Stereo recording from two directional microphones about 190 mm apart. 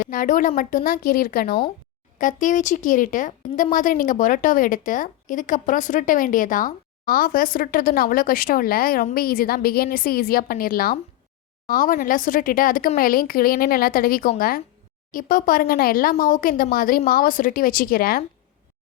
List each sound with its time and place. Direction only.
0.0 s speech: 45° left (ahead or behind)